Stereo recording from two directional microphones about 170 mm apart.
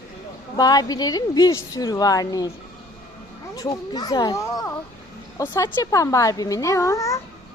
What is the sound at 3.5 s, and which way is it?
A woman's voice, 20° left (ahead or behind).